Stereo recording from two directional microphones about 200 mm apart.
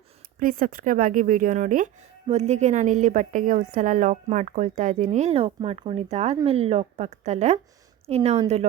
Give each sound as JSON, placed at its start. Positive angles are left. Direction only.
{"t": 0.3, "sound": "a woman's voice", "side_deg": -45}